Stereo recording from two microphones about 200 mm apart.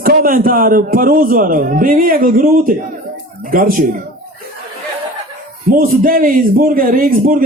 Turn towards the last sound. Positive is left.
turn(degrees=-45)  # may be behind; listen again after turning